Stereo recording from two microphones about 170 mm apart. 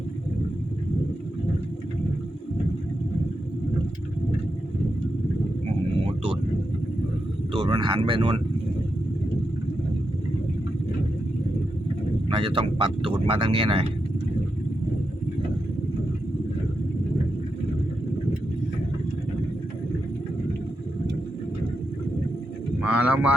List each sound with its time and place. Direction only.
7.5 s speech: 30° right (ahead or behind)
12.3 s speech: 30° right (ahead or behind)
22.8 s a sound: 5° right (ahead or behind)